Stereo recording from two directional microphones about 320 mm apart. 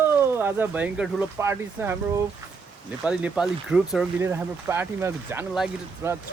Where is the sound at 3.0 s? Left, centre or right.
Centre.